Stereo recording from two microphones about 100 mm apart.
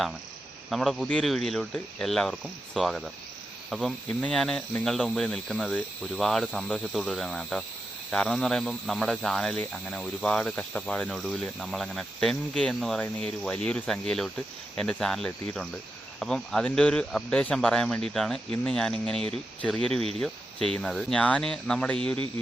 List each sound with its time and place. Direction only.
0.7 s speech: centre (ahead or behind)
3.7 s cricket: centre (ahead or behind)
4.2 s speech: 5° left (ahead or behind)
20.0 s speech: 80° right
20.2 s speech: 5° left (ahead or behind)